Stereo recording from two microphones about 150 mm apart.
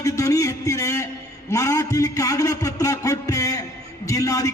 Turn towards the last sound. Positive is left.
turn(degrees=20)  # may be behind; listen again after turning